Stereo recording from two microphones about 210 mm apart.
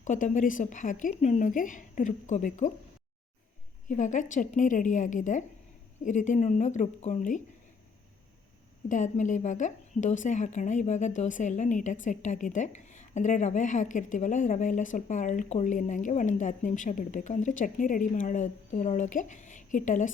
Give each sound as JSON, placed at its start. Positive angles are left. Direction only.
{"t": 0.0, "sound": "a woman's voice", "side_deg": 35}
{"t": 3.8, "sound": "a woman's voice", "side_deg": 35}
{"t": 8.9, "sound": "a woman's voice", "side_deg": 35}